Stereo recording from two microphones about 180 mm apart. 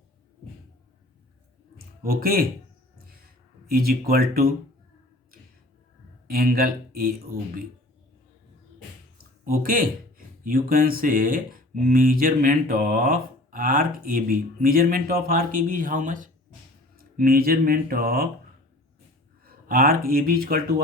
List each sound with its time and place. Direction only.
2.0 s speech: 55° right (ahead or behind)
3.0 s a sound: 55° right (ahead or behind)
3.7 s speech: 55° right (ahead or behind)
6.2 s speech: 55° right (ahead or behind)
9.4 s speech: 50° right (ahead or behind)
19.5 s speech: 55° right (ahead or behind)